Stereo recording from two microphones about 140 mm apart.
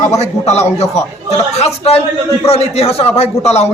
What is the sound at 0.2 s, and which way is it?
A man's voice, 50° left (ahead or behind).